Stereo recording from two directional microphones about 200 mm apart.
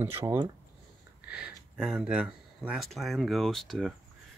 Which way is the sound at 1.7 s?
5° right (ahead or behind).